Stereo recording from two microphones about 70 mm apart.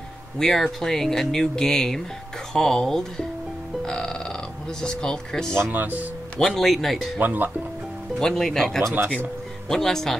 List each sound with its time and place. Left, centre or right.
0.4 s speech: centre
5.7 s speech: right
6.4 s speech: centre
7.2 s speech: right
8.2 s speech: centre